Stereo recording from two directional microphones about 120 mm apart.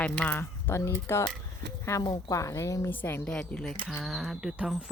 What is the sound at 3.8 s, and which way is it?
Speech, centre (ahead or behind).